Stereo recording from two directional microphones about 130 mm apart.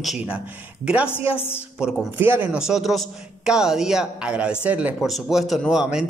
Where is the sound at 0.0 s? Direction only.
Centre (ahead or behind).